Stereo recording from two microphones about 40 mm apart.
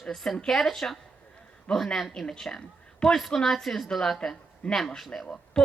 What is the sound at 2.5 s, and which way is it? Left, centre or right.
Speech, left.